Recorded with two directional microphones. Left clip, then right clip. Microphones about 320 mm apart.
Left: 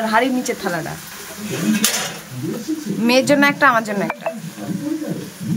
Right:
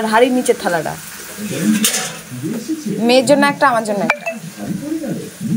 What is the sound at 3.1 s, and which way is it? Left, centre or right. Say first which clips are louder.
Speech: right 3 dB; centre.